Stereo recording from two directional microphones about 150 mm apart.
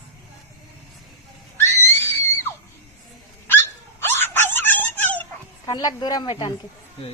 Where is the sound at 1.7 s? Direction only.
45° right (ahead or behind).